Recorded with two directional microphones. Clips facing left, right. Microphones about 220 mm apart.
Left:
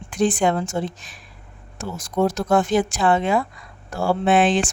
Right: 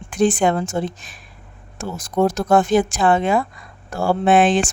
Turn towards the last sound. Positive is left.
turn(degrees=-50)  # may be behind; listen again after turning